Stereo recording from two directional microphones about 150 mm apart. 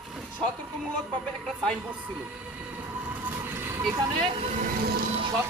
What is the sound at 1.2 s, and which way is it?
Speech, 5° left (ahead or behind).